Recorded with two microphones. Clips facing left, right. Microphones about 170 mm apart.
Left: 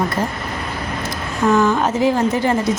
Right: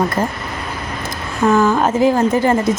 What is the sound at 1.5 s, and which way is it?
Speech, 50° right (ahead or behind).